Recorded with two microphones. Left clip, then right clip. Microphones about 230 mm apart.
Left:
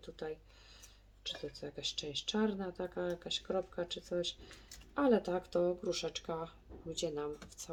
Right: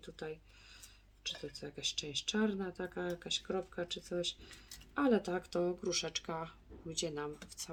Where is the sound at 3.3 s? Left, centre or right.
Right.